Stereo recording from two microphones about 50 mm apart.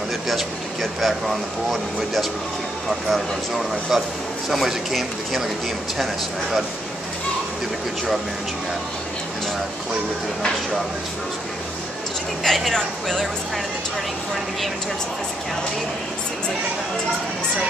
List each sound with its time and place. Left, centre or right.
1.0 s speech: centre
3.1 s speech: centre
12.4 s speech: centre